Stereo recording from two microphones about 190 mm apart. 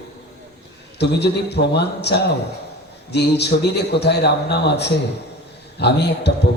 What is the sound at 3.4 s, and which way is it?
A man's voice, 60° left (ahead or behind).